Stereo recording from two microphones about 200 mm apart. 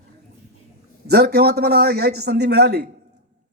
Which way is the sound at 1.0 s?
55° right (ahead or behind).